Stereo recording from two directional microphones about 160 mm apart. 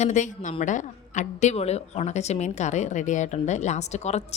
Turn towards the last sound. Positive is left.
turn(degrees=45)  # may be behind; listen again after turning